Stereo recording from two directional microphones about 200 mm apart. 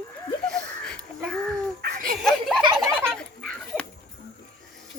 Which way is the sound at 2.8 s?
5° left (ahead or behind).